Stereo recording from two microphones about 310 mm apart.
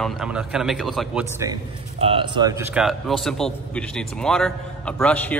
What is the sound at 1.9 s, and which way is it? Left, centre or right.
A man's voice, centre.